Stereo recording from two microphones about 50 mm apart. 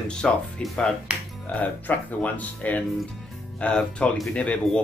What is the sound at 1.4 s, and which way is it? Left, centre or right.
Speech, left.